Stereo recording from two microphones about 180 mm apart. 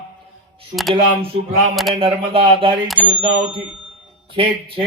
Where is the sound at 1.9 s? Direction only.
30° right (ahead or behind).